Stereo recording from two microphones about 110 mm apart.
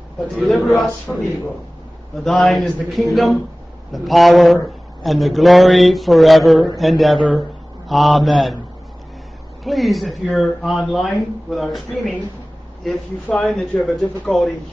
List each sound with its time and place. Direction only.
0.5 s speech: centre (ahead or behind)
9.7 s speech: centre (ahead or behind)
13.5 s speech: centre (ahead or behind)